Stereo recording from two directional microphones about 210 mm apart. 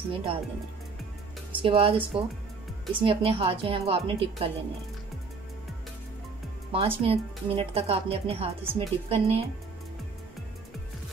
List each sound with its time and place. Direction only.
0.1 s speech: 25° right (ahead or behind)
1.6 s speech: 25° right (ahead or behind)
6.7 s speech: 25° right (ahead or behind)